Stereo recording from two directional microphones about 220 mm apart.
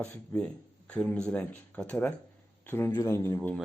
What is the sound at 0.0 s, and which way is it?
Speech, 5° left (ahead or behind).